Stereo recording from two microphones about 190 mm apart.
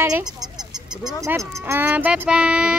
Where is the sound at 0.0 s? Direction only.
20° right (ahead or behind).